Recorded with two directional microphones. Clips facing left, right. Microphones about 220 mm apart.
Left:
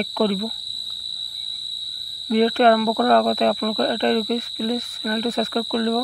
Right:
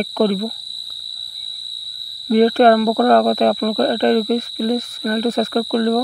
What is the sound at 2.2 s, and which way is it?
Speech, 45° right (ahead or behind).